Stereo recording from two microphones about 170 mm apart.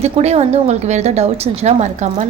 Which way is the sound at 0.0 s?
40° right (ahead or behind).